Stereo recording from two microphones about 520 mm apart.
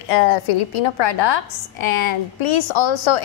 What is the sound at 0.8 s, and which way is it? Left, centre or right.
A woman's voice, left.